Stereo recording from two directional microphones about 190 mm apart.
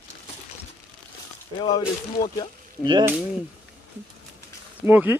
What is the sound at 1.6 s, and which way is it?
Speech, 25° left (ahead or behind).